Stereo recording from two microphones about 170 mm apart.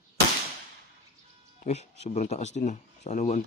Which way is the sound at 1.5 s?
40° left (ahead or behind).